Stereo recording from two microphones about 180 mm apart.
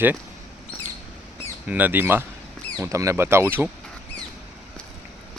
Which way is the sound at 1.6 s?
10° right (ahead or behind).